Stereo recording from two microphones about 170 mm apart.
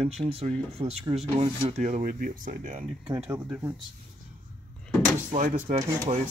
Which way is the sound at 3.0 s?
30° right (ahead or behind).